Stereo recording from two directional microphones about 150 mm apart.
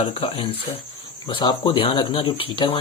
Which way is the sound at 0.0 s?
40° left (ahead or behind).